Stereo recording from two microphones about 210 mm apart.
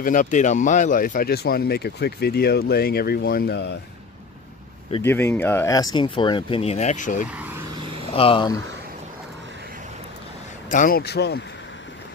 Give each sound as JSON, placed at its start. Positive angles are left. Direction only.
{"t": 0.0, "sound": "speech", "side_deg": 40}
{"t": 5.0, "sound": "speech", "side_deg": 10}
{"t": 7.3, "sound": "vehicle", "side_deg": -10}
{"t": 8.1, "sound": "speech", "side_deg": 25}
{"t": 10.7, "sound": "speech", "side_deg": 40}